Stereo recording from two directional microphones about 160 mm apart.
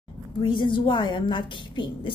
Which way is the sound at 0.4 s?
30° left (ahead or behind).